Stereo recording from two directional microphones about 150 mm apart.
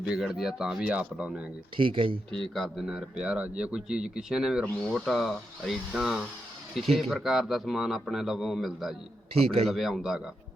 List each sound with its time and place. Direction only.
0.0 s a man's voice: 5° right (ahead or behind)
1.7 s speech: 35° right (ahead or behind)
2.6 s a man's voice: centre (ahead or behind)